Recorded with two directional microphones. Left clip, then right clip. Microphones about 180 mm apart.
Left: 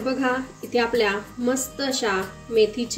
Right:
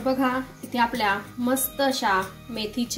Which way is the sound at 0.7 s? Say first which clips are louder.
Left 2 dB; 25° right (ahead or behind).